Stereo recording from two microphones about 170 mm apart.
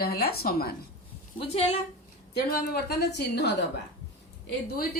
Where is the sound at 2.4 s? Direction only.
65° left (ahead or behind); by 3.7 s 90° left.